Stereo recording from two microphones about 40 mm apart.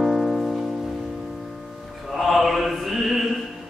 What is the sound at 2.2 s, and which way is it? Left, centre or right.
Mantra, centre.